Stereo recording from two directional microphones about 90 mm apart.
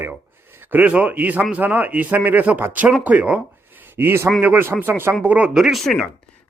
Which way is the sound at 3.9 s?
25° right (ahead or behind).